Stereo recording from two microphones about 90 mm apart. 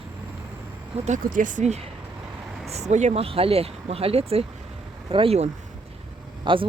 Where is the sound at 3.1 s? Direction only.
90° right.